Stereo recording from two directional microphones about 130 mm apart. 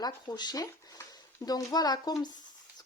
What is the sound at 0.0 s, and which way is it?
Speech, 30° left (ahead or behind).